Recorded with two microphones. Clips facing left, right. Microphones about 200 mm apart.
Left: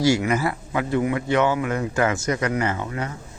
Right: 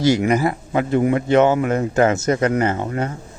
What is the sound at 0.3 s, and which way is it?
Speech, 15° right (ahead or behind).